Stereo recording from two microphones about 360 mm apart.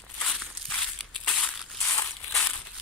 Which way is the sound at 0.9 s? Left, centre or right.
Centre.